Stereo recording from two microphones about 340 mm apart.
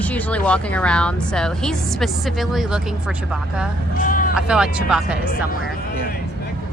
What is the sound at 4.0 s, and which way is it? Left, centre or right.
Speech, left.